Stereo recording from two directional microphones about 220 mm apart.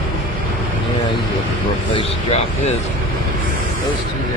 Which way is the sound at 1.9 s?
30° left (ahead or behind).